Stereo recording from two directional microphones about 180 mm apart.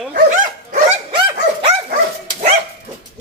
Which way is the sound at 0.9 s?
30° right (ahead or behind).